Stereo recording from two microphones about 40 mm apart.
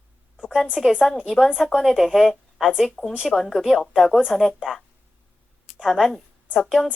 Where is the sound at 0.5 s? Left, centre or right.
Centre.